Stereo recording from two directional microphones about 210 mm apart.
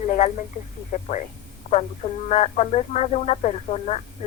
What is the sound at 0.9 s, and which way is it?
Speech, 35° left (ahead or behind).